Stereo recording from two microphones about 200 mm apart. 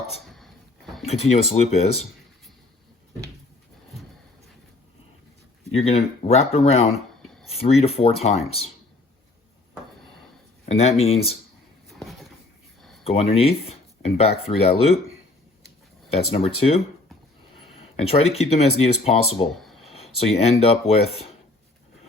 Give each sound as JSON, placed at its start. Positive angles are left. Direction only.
{"t": 0.3, "sound": "a sound", "side_deg": 0}
{"t": 1.0, "sound": "speech", "side_deg": 30}
{"t": 5.7, "sound": "speech", "side_deg": 30}
{"t": 10.7, "sound": "speech", "side_deg": 30}
{"t": 11.9, "sound": "a sound", "side_deg": 0}
{"t": 13.1, "sound": "speech", "side_deg": 30}
{"t": 16.0, "sound": "speech", "side_deg": 30}
{"t": 17.9, "sound": "speech", "side_deg": 30}
{"t": 19.3, "sound": "a sound", "side_deg": 0}
{"t": 20.1, "sound": "speech", "side_deg": 30}